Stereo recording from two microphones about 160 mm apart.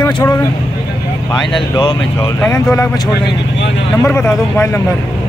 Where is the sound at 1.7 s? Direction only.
25° left (ahead or behind).